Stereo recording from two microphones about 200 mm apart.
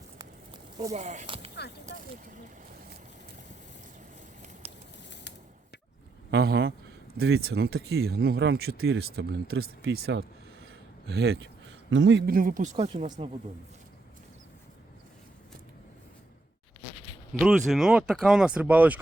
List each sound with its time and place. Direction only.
0.2 s a sound: 20° right (ahead or behind)
0.9 s speech: 35° right (ahead or behind)
1.5 s speech: 55° left (ahead or behind)
4.6 s a sound: 30° right (ahead or behind)
6.3 s speech: 55° right (ahead or behind); by 13.1 s 35° right (ahead or behind)
17.4 s speech: centre (ahead or behind)